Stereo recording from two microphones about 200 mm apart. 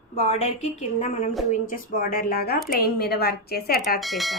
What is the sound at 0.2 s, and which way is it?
A woman's voice, 35° left (ahead or behind).